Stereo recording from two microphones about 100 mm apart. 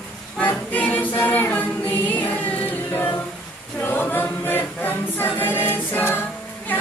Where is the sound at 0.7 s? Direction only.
15° left (ahead or behind).